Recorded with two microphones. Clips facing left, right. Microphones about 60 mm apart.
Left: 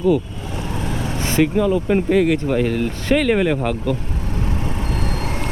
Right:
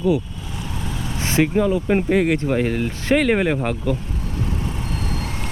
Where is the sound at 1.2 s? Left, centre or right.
Centre.